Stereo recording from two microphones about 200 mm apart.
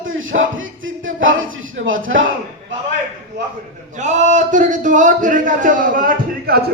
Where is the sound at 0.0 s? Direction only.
75° right (ahead or behind).